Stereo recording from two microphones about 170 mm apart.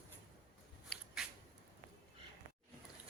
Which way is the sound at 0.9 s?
5° left (ahead or behind).